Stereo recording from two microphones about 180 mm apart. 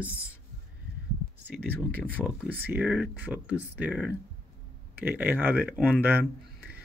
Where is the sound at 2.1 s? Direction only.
10° right (ahead or behind).